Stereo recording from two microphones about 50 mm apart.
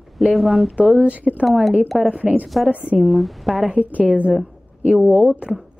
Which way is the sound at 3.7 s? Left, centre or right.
Right.